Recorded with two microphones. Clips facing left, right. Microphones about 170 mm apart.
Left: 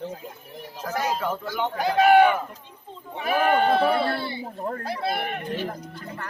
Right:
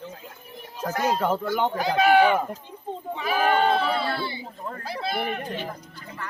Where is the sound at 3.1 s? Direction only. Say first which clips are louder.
Left 1 dB; 55° left (ahead or behind).